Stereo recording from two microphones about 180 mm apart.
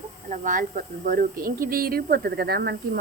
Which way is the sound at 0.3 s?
45° right (ahead or behind).